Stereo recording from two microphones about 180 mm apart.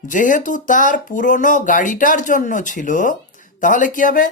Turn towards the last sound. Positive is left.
turn(degrees=50)  # may be behind; listen again after turning